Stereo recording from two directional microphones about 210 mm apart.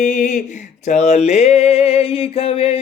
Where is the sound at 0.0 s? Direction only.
35° left (ahead or behind).